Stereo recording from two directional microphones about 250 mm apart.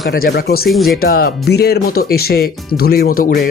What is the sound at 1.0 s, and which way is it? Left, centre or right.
Speech, left.